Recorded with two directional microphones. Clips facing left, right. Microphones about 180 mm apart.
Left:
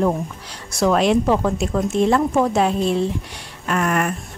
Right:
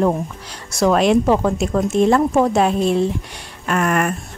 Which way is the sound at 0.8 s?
45° right (ahead or behind).